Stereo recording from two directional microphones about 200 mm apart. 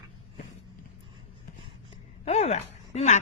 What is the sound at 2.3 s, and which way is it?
Speech, 35° left (ahead or behind).